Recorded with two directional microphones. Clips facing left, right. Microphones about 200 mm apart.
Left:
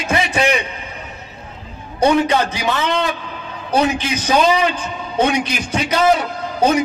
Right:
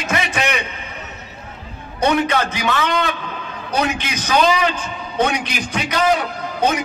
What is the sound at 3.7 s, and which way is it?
Speech, 30° left (ahead or behind).